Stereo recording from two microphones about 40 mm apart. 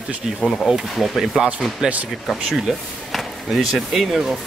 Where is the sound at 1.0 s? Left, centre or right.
Centre.